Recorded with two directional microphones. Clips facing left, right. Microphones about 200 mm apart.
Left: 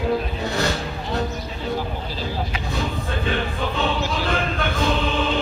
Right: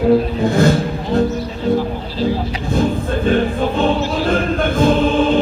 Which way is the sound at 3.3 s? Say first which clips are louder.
Right 10 dB; 45° right (ahead or behind).